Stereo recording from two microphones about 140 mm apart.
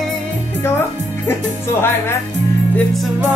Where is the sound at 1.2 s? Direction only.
15° left (ahead or behind).